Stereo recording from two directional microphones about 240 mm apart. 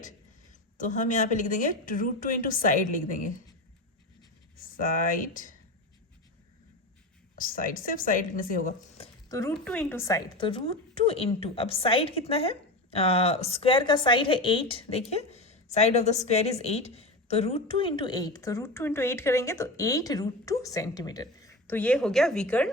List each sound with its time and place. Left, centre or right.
0.8 s a woman's voice: left
4.8 s a woman's voice: left
7.3 s a woman's voice: left
9.5 s a woman's voice: centre